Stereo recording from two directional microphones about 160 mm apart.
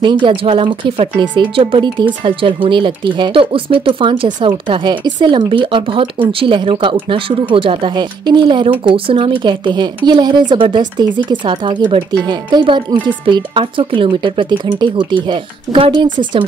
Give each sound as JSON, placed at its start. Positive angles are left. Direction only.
{"t": 0.0, "sound": "speech", "side_deg": -30}